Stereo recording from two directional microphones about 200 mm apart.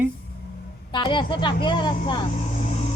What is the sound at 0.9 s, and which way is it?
A woman's voice, 25° left (ahead or behind).